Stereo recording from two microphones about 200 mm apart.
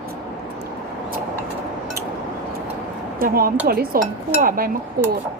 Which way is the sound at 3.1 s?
45° right (ahead or behind).